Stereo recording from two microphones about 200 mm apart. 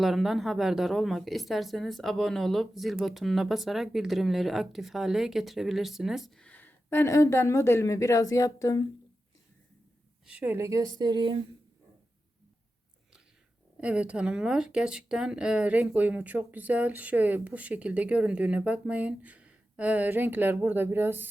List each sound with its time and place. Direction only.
0.0 s speech: centre (ahead or behind); by 8.8 s 15° left (ahead or behind)
10.2 s speech: 10° right (ahead or behind)
13.8 s speech: 5° right (ahead or behind)